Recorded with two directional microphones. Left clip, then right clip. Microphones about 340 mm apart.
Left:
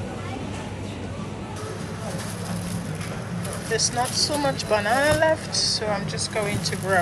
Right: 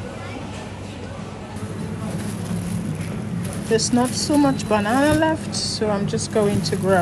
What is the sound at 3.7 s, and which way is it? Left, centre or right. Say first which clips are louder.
Speech: right 4 dB; centre.